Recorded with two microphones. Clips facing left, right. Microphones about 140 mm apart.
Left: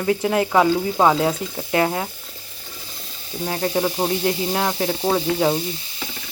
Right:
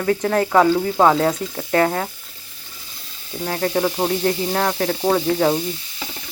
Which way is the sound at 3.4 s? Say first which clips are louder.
Right 1 dB; 15° left (ahead or behind).